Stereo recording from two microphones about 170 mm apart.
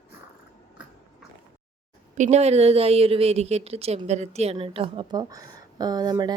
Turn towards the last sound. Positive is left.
turn(degrees=-25)  # may be behind; listen again after turning